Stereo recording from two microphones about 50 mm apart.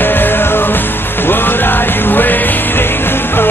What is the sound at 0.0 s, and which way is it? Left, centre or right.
Music, left.